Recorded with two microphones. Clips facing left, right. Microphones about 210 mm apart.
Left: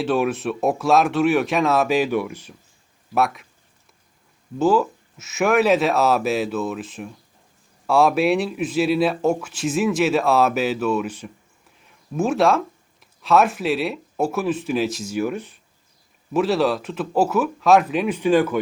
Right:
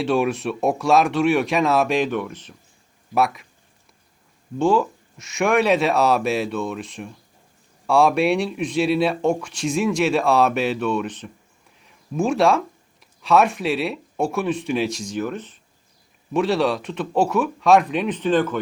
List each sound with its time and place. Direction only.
0.0 s speech: centre (ahead or behind)
4.5 s speech: 5° left (ahead or behind)